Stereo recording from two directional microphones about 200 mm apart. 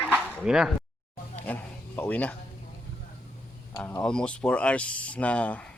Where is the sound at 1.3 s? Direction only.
10° left (ahead or behind).